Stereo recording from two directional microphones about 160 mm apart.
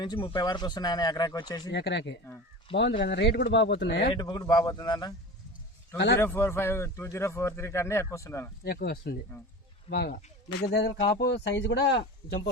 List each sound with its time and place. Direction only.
0.0 s speech: 30° left (ahead or behind)
1.7 s speech: 90° left
4.1 s speech: 25° left (ahead or behind)
6.1 s a man's voice: 15° left (ahead or behind)
8.6 s speech: 80° left